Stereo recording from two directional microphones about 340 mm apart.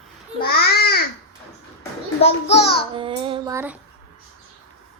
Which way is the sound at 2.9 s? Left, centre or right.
Centre.